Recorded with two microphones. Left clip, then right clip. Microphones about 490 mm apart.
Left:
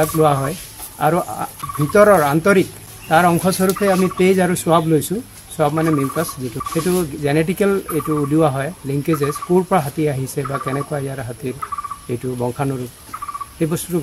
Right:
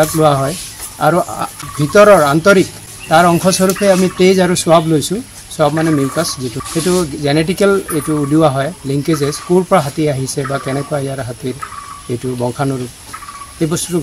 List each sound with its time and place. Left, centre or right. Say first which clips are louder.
0.0 s speech: right 4 dB; left
12.4 s speech: right 5 dB; left